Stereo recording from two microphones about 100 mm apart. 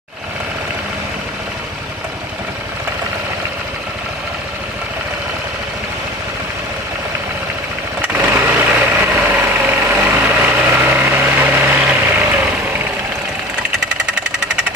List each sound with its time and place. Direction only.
8.0 s vehicle: 15° right (ahead or behind)